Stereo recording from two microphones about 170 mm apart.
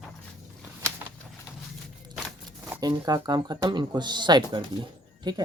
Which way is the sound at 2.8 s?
20° right (ahead or behind).